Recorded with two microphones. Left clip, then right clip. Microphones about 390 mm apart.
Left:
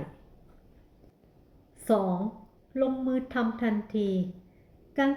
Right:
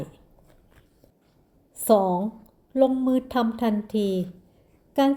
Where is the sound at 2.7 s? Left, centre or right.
Right.